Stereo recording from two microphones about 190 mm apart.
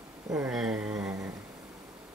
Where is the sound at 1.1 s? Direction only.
15° right (ahead or behind).